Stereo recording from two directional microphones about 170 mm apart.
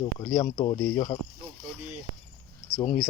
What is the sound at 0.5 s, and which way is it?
Speech, 30° left (ahead or behind).